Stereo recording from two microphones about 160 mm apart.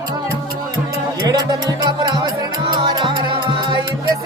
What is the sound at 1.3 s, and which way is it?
Music, 25° right (ahead or behind).